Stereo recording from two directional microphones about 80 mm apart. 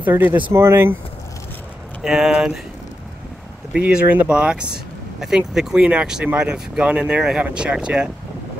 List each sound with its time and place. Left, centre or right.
0.0 s speech: right
2.0 s speech: centre
3.7 s speech: centre